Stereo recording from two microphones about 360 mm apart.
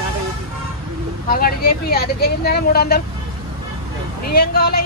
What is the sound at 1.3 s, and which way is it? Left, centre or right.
Speech, left.